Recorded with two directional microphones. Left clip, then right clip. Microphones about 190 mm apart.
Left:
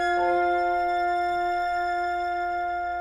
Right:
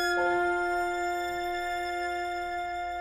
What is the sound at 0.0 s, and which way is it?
Music, 15° left (ahead or behind).